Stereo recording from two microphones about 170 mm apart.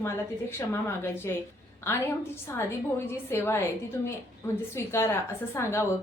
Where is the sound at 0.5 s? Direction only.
15° left (ahead or behind).